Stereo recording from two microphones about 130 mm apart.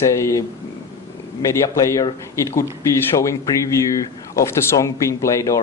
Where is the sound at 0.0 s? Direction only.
20° left (ahead or behind).